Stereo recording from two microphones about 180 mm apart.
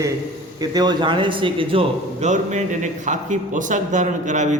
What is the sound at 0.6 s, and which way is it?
A man's voice, 20° right (ahead or behind).